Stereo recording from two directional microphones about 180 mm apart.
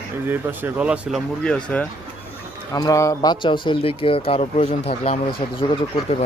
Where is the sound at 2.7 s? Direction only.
20° left (ahead or behind).